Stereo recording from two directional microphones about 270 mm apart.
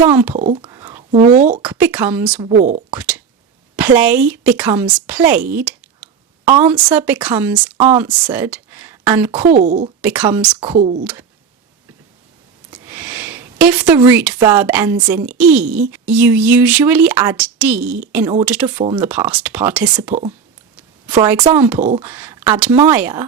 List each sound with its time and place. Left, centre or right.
0.0 s a woman's voice: centre
0.3 s whispering: right
1.2 s speech: right
1.9 s a woman's voice: centre
2.4 s speech: right
3.8 s a woman's voice: centre
9.4 s speech: right
10.0 s a woman's voice: centre
10.6 s speech: right
11.0 s speech: centre
12.7 s a woman's voice: centre
21.8 s speech: right
22.0 s a woman's voice: centre